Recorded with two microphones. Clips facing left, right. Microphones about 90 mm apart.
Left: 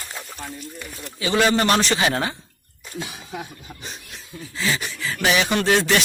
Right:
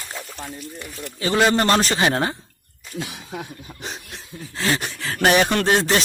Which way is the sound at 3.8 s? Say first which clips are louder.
Right 6 dB; 90° right.